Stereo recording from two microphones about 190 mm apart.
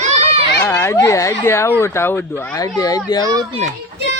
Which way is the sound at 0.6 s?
10° left (ahead or behind).